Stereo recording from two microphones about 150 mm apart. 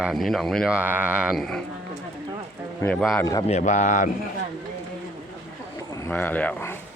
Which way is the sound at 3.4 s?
50° left (ahead or behind).